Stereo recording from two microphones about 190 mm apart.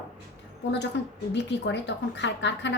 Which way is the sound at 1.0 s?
65° left (ahead or behind).